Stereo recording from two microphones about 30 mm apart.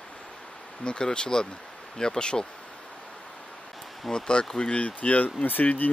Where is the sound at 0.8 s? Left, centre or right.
Left.